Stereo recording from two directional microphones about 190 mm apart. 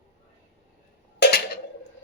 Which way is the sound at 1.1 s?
60° left (ahead or behind).